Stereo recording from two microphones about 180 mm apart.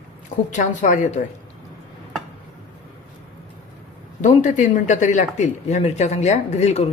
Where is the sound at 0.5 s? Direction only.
45° left (ahead or behind).